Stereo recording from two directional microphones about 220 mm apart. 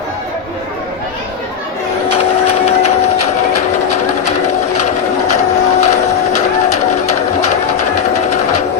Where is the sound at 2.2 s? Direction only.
30° left (ahead or behind).